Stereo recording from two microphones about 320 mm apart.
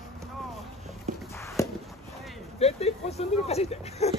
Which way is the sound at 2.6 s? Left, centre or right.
Centre.